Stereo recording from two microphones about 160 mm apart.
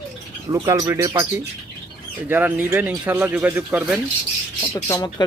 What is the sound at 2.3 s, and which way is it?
Speech, 10° right (ahead or behind).